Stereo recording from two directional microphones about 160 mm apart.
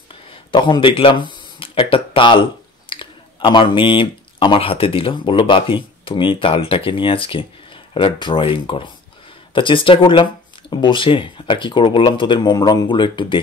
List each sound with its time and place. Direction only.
0.1 s speech: 30° left (ahead or behind)